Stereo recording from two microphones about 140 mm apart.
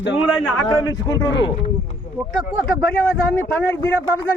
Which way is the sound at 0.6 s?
30° left (ahead or behind).